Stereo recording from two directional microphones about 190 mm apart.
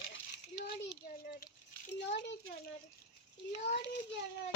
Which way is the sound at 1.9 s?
65° left (ahead or behind).